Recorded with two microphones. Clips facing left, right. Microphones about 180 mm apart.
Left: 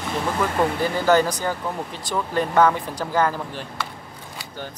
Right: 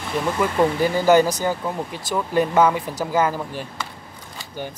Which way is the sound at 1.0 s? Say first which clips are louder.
Right 3 dB; 10° right (ahead or behind).